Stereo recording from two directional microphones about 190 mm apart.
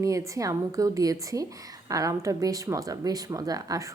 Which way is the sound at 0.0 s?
15° right (ahead or behind).